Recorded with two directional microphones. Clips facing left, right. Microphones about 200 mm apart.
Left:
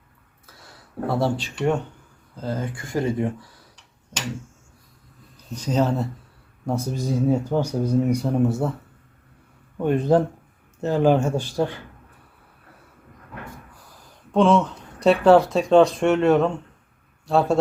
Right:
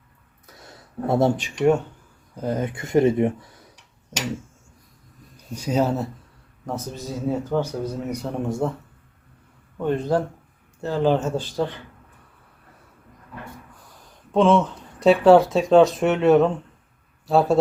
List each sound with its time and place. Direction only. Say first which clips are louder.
0.4 s a sound: right 3 dB; 20° right (ahead or behind)
2.3 s speech: right 3 dB; 20° right (ahead or behind)
5.5 s speech: even; 10° right (ahead or behind)
6.7 s speech: left 5 dB; 10° left (ahead or behind)
9.7 s speech: left 3 dB; 15° left (ahead or behind)
14.3 s speech: even; centre (ahead or behind)